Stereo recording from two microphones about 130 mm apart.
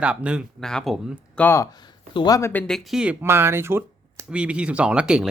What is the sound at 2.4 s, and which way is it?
Speech, 15° left (ahead or behind).